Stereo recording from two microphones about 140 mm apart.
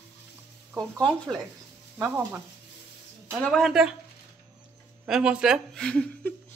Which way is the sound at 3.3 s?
5° left (ahead or behind).